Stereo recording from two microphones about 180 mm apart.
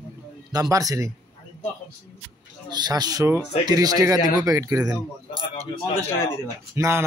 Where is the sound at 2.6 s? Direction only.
25° right (ahead or behind).